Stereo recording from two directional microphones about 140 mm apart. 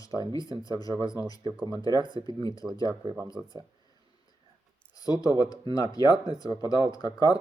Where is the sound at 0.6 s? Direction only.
25° left (ahead or behind).